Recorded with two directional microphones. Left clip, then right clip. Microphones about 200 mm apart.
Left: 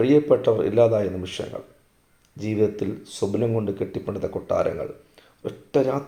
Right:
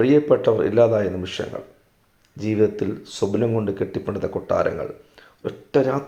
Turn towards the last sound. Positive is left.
turn(degrees=-15)  # may be behind; listen again after turning